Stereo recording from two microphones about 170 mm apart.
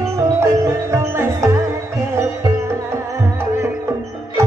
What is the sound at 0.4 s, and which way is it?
Music, 15° right (ahead or behind).